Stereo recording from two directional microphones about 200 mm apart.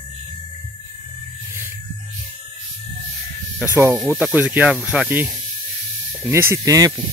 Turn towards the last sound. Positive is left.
turn(degrees=-15)  # may be behind; listen again after turning